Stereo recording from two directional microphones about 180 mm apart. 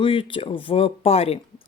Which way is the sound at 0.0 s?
30° left (ahead or behind).